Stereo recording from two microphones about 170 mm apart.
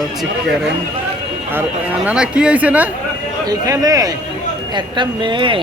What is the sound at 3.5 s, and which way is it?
Speech, 20° right (ahead or behind).